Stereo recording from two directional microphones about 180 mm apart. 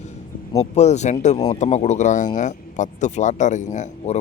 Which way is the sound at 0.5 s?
40° left (ahead or behind).